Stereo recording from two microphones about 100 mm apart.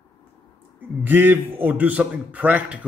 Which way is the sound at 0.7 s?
20° right (ahead or behind).